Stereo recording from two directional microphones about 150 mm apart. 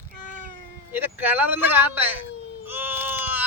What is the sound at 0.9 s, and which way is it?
Speech, 15° right (ahead or behind).